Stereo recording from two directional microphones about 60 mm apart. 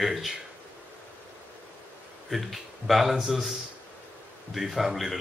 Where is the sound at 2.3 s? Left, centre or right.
Centre.